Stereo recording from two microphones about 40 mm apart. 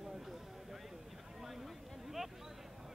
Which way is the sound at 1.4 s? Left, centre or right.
Centre.